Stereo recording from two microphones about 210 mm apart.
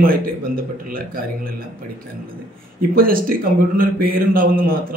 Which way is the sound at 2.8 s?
45° right (ahead or behind).